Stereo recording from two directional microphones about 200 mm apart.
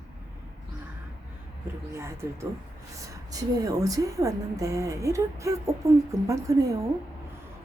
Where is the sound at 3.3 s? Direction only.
20° right (ahead or behind).